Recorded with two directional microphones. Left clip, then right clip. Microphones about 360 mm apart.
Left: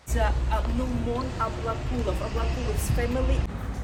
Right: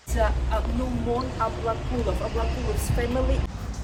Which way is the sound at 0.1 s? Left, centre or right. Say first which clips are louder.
Right 2 dB; centre.